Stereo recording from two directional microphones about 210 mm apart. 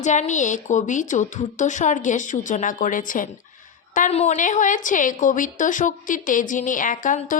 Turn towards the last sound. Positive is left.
turn(degrees=40)  # may be behind; listen again after turning